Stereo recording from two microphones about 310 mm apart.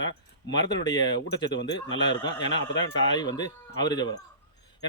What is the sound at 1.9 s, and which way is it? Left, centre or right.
Speech, centre.